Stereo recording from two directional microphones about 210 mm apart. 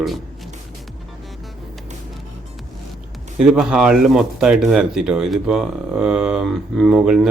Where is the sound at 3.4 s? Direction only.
5° right (ahead or behind).